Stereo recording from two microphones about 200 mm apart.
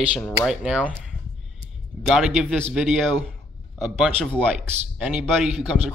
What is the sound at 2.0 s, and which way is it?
Speech, 5° right (ahead or behind).